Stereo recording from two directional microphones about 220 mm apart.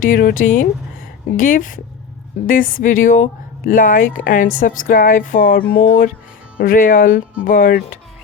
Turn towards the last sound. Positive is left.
turn(degrees=40)  # may be behind; listen again after turning